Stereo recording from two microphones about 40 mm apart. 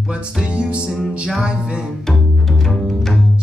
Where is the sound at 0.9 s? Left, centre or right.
Centre.